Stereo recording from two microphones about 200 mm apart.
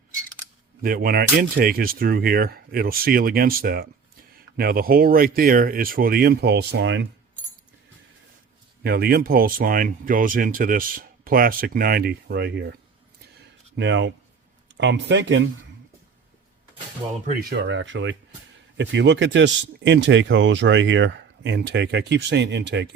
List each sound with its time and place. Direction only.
0.8 s speech: 50° right (ahead or behind); by 7.1 s 65° right (ahead or behind)
8.8 s speech: 50° right (ahead or behind)
13.7 s speech: 65° right (ahead or behind)
17.0 s speech: 20° right (ahead or behind)
17.5 s speech: 60° right (ahead or behind)